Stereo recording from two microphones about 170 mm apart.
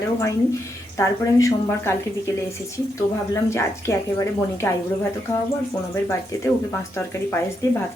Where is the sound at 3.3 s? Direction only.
15° left (ahead or behind).